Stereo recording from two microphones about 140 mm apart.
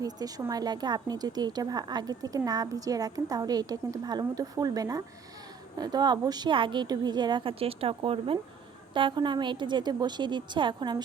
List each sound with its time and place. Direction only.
0.0 s a woman's voice: 25° right (ahead or behind)